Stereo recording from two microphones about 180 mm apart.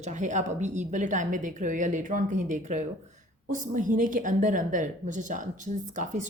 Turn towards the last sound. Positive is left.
turn(degrees=-45)  # may be behind; listen again after turning